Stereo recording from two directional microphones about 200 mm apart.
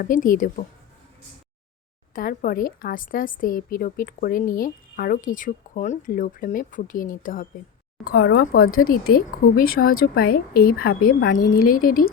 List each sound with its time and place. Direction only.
0.0 s a woman's voice: 40° left (ahead or behind)
2.1 s a woman's voice: 45° left (ahead or behind)
8.6 s speech: 90° left
8.9 s a woman's voice: 45° left (ahead or behind)